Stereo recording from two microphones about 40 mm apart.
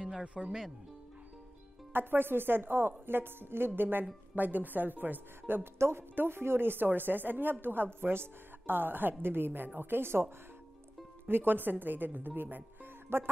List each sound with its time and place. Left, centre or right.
0.2 s speech: right
1.9 s a woman's voice: right
5.6 s a woman's voice: right
11.2 s speech: right
13.1 s speech: right